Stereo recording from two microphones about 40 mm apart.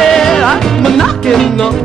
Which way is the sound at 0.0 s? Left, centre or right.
Centre.